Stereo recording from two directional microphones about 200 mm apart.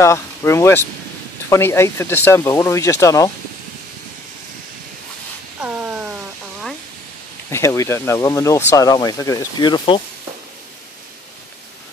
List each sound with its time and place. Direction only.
0.0 s speech: 15° left (ahead or behind)
5.6 s a sound: 5° right (ahead or behind)
7.5 s speech: 15° left (ahead or behind)